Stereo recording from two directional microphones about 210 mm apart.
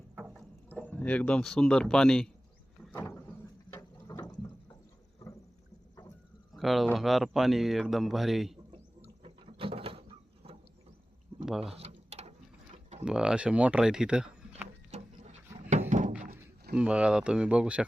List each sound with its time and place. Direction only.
0.2 s a sound: 5° right (ahead or behind)
0.7 s speech: 5° left (ahead or behind)
2.9 s water: 10° left (ahead or behind)
6.5 s speech: centre (ahead or behind)
9.2 s a sound: 25° right (ahead or behind)
11.6 s mechanisms: 30° right (ahead or behind)
13.1 s speech: 5° right (ahead or behind)
14.8 s a sound: 35° right (ahead or behind)
15.7 s thunk: 35° right (ahead or behind)
16.7 s speech: 5° right (ahead or behind)